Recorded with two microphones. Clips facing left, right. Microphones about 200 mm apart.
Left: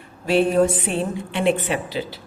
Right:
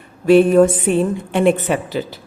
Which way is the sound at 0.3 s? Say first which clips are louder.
Right 7 dB; 50° right (ahead or behind).